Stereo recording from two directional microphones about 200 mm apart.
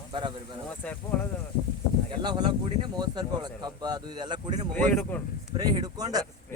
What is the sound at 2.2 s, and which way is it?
Speech, 20° right (ahead or behind).